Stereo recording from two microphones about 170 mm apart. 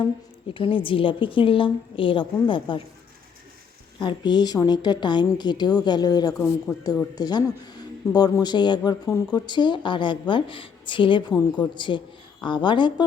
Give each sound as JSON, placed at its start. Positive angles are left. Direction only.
{"t": 0.5, "sound": "a woman's voice", "side_deg": 30}
{"t": 4.0, "sound": "speech", "side_deg": 25}